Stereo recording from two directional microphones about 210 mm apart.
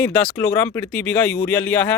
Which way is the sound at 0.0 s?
10° left (ahead or behind).